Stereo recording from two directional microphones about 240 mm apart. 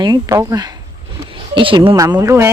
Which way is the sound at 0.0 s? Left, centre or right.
Centre.